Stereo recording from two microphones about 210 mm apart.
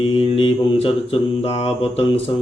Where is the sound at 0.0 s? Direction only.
25° left (ahead or behind).